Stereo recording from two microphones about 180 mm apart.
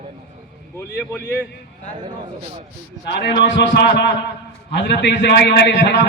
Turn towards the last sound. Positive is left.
turn(degrees=75)  # may be behind; listen again after turning